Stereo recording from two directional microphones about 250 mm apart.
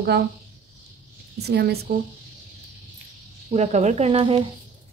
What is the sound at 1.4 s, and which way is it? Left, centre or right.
Speech, right.